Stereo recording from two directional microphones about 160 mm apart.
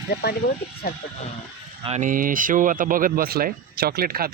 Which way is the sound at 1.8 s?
50° right (ahead or behind).